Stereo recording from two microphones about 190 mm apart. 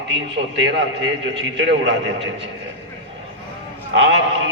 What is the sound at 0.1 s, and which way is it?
A man's voice, 70° right (ahead or behind).